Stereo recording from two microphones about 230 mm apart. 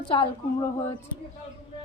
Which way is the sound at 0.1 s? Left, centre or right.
Left.